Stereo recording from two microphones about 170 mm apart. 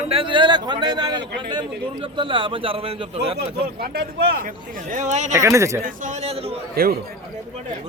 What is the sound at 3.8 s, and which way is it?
Speech, 70° right (ahead or behind).